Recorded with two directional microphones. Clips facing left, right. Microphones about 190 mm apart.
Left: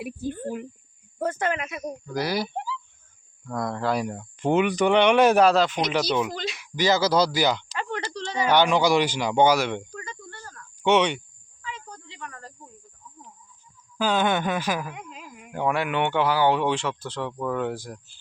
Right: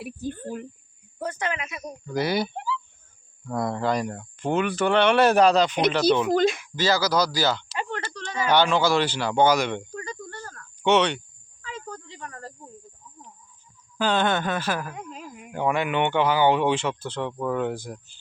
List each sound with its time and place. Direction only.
0.0 s speech: 10° left (ahead or behind)
1.2 s speech: 50° left (ahead or behind)
2.1 s speech: centre (ahead or behind)
4.4 s speech: 20° left (ahead or behind)
6.3 s speech: 50° right (ahead or behind)
6.7 s speech: 20° left (ahead or behind)
8.1 s a sound: 25° left (ahead or behind)
8.4 s speech: 15° left (ahead or behind)
9.9 s cricket: 35° right (ahead or behind)
10.8 s speech: 10° left (ahead or behind)
11.6 s snake: 45° right (ahead or behind)
14.0 s speech: 5° left (ahead or behind)
14.9 s a sound: 45° right (ahead or behind)
15.5 s speech: 5° left (ahead or behind)